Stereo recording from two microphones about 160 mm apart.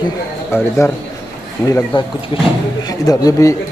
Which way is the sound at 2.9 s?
25° left (ahead or behind).